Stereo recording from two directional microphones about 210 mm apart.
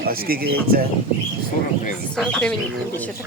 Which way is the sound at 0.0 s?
45° right (ahead or behind).